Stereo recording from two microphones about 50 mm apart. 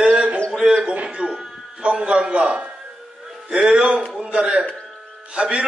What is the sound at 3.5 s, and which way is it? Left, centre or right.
A man's voice, right.